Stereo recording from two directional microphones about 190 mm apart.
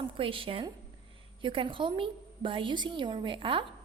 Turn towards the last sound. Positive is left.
turn(degrees=-25)  # may be behind; listen again after turning